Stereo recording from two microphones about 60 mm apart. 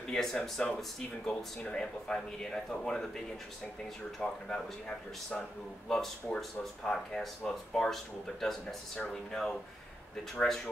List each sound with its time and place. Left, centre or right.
0.1 s speech: centre
4.2 s speech: centre